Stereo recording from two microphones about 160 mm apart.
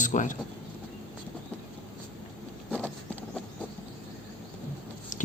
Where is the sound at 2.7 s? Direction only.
5° left (ahead or behind).